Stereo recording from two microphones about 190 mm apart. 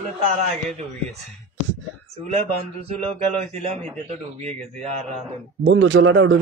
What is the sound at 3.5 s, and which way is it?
A man's voice, 35° right (ahead or behind).